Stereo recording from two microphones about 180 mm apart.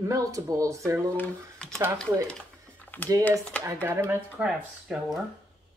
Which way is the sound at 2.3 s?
10° left (ahead or behind).